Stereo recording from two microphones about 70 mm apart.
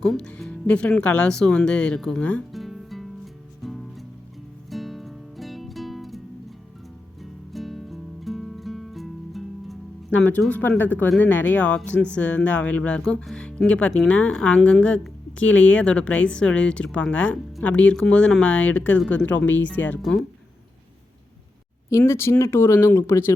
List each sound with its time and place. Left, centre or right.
0.0 s speech: centre
2.5 s music: centre
7.2 s music: centre
10.1 s speech: left
20.0 s speech: centre
21.8 s speech: left